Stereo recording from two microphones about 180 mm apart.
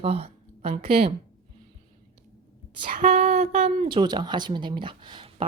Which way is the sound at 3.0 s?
35° right (ahead or behind).